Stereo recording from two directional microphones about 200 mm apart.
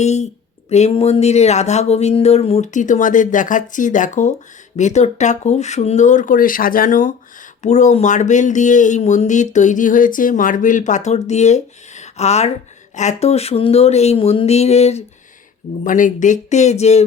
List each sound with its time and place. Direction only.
0.0 s speech: 35° left (ahead or behind)